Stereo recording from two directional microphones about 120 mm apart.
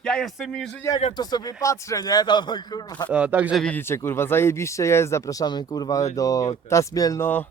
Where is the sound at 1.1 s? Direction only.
35° left (ahead or behind).